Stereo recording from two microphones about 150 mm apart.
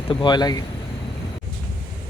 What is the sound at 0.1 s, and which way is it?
Speech, 30° left (ahead or behind).